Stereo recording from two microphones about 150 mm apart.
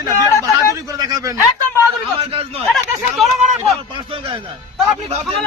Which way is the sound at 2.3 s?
40° right (ahead or behind).